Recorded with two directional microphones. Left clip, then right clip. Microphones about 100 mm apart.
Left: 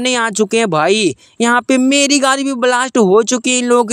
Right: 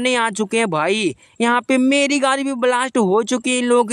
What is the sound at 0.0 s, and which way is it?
Speech, 35° left (ahead or behind).